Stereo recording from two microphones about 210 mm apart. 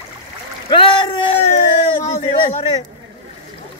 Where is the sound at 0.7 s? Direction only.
25° left (ahead or behind).